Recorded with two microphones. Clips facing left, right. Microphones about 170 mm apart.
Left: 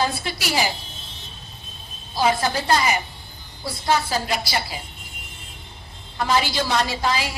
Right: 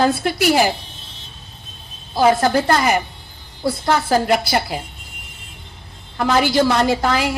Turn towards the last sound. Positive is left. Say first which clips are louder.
# right 6 dB
turn(degrees=-55)  # may be behind; listen again after turning